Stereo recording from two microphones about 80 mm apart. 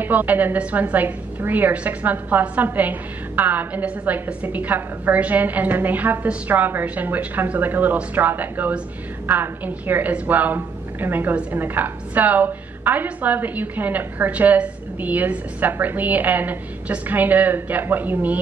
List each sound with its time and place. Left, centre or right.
0.0 s a woman's voice: right